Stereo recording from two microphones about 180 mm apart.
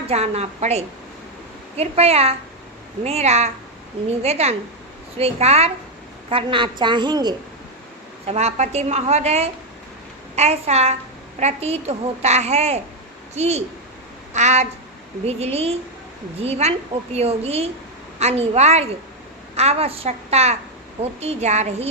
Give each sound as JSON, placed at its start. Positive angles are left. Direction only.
{"t": 0.1, "sound": "a child's voice", "side_deg": -35}
{"t": 8.3, "sound": "a child's voice", "side_deg": -35}